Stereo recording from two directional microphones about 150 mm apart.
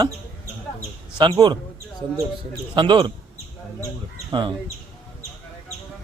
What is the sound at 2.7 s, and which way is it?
Speech, 30° right (ahead or behind).